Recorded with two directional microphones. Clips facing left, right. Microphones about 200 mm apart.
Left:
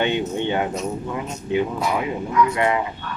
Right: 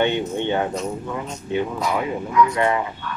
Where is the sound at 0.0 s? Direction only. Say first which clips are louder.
Right 1 dB; 15° left (ahead or behind).